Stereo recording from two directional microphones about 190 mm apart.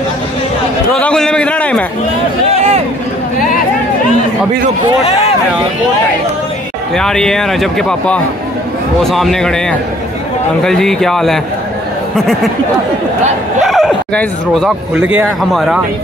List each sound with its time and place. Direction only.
0.9 s a man's voice: 5° left (ahead or behind)
2.5 s a sound: 30° right (ahead or behind)
7.0 s speech: 5° left (ahead or behind)
13.6 s speech: centre (ahead or behind)